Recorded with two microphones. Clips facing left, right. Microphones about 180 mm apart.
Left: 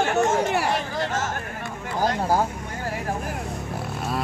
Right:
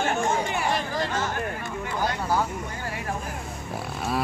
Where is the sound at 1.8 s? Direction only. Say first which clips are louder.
Left 5 dB; 40° left (ahead or behind).